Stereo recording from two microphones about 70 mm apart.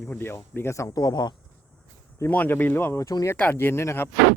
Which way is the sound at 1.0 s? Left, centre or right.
Left.